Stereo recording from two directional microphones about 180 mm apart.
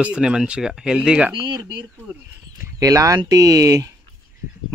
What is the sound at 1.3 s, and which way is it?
Speech, 25° right (ahead or behind).